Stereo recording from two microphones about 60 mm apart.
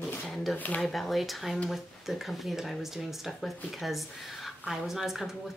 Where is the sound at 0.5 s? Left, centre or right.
Left.